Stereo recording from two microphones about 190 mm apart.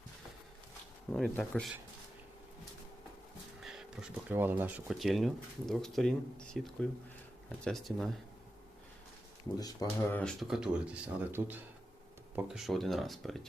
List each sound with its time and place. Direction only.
1.1 s speech: 5° left (ahead or behind)
3.6 s a sound: centre (ahead or behind)
4.3 s speech: 10° right (ahead or behind)
9.6 s speech: 20° left (ahead or behind)
10.2 s speech: centre (ahead or behind)